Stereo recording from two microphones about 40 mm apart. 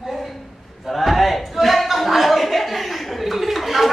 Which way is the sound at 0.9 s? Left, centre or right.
Centre.